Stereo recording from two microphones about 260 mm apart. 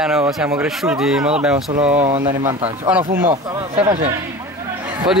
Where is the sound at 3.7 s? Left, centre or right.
Right.